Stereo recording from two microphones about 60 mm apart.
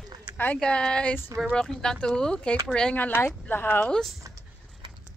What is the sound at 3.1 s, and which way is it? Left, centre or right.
Speech, left.